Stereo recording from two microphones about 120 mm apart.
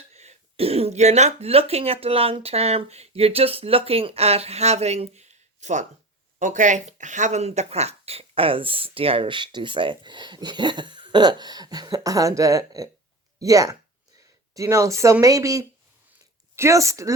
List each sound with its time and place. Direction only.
0.1 s speech: 60° right (ahead or behind)
6.4 s speech: 90° right; by 17.2 s 25° right (ahead or behind)